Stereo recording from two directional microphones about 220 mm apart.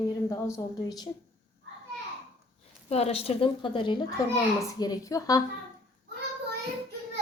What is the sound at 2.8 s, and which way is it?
A woman's voice, 30° left (ahead or behind).